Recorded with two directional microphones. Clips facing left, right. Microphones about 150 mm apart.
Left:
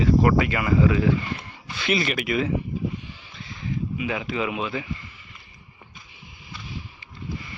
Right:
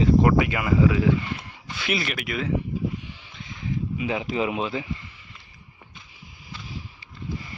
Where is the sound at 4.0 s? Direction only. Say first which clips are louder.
Right 2 dB; 30° right (ahead or behind).